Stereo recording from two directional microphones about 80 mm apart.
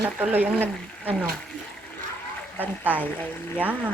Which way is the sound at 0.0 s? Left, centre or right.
Right.